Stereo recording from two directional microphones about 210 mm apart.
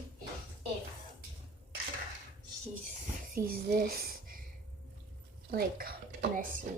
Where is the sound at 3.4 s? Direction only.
45° right (ahead or behind).